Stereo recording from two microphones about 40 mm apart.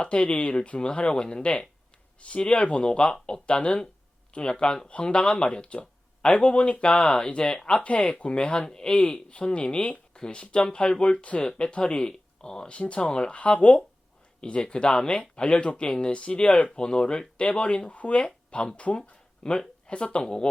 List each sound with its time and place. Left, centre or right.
0.0 s speech: left
12.7 s speech: left
16.1 s speech: left